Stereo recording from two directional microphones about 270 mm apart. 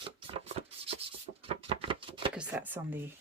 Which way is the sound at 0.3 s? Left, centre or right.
Right.